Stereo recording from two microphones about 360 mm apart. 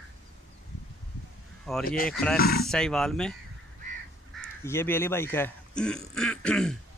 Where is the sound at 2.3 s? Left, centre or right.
Left.